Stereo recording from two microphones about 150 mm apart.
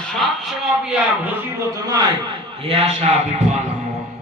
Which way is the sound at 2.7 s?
40° right (ahead or behind).